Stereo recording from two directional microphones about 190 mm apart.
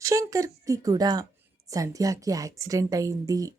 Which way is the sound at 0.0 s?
15° right (ahead or behind).